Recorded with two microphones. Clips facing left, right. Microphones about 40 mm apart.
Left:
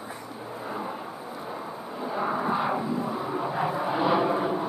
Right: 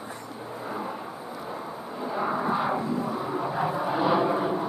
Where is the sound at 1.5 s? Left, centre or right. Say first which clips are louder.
Even; centre.